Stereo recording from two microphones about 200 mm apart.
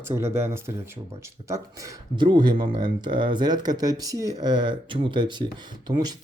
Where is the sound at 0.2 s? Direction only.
15° right (ahead or behind).